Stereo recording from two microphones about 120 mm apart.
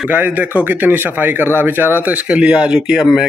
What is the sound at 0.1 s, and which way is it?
A man's voice, 15° right (ahead or behind).